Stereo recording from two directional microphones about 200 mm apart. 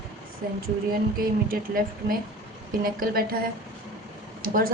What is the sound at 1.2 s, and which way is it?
A woman's voice, 45° right (ahead or behind).